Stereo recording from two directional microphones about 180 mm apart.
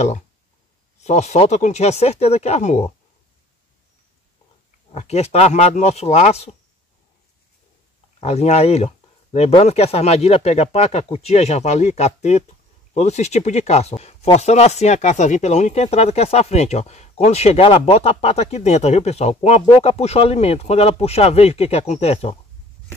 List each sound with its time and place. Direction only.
1.0 s speech: 40° left (ahead or behind)
4.9 s speech: 40° left (ahead or behind)
8.2 s speech: 35° left (ahead or behind)